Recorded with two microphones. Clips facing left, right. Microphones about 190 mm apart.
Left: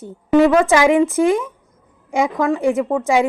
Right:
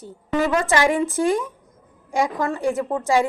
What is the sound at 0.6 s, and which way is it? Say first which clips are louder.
Speech: left 6 dB; 90° left.